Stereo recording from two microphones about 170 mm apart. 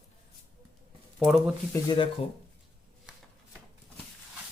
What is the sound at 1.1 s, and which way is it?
Speech, centre (ahead or behind).